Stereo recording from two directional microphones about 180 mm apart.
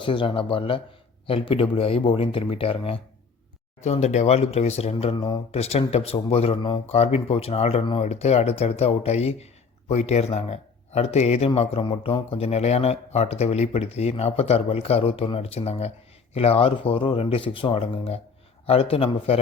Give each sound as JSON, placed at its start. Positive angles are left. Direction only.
{"t": 0.0, "sound": "speech", "side_deg": 30}